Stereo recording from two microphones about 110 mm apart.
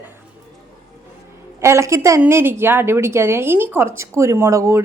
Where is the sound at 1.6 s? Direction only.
25° right (ahead or behind).